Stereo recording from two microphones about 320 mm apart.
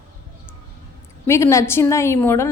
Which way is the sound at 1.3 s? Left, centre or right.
Centre.